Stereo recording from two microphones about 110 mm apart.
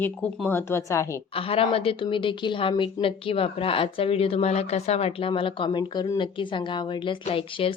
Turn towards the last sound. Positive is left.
turn(degrees=55)  # may be behind; listen again after turning